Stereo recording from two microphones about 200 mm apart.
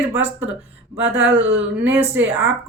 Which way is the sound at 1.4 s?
10° right (ahead or behind).